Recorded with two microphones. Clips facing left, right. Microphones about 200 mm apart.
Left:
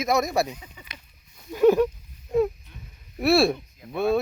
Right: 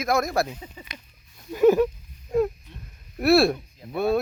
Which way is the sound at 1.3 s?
Centre (ahead or behind).